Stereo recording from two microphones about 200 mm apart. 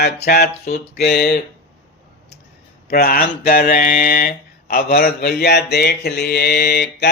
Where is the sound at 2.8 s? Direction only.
50° left (ahead or behind).